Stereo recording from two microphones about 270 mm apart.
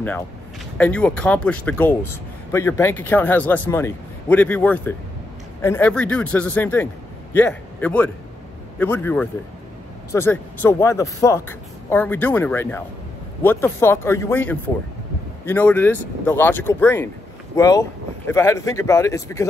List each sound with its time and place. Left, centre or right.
0.7 s a man's voice: centre